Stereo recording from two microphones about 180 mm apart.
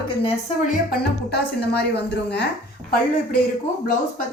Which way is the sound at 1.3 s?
65° left (ahead or behind).